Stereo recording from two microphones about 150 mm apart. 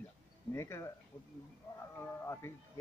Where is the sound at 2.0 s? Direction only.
15° left (ahead or behind).